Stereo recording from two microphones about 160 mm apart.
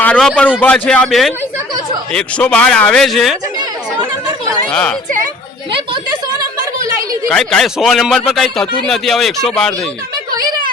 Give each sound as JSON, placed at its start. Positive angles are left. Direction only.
{"t": 0.0, "sound": "a man's voice", "side_deg": 5}
{"t": 4.7, "sound": "speech", "side_deg": 5}
{"t": 5.7, "sound": "a sound", "side_deg": -30}
{"t": 7.3, "sound": "a man's voice", "side_deg": 5}